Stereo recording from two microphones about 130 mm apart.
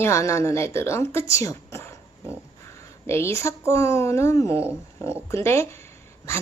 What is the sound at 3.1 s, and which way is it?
A woman's voice, 20° left (ahead or behind).